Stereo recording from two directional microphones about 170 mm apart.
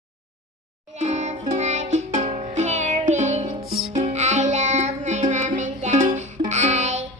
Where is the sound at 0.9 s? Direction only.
45° right (ahead or behind).